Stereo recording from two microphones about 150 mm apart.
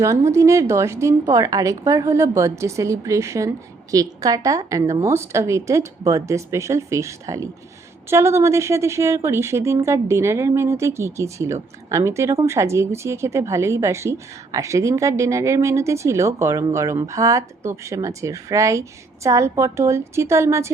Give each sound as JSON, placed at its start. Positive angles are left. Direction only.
{"t": 0.3, "sound": "speech", "side_deg": -20}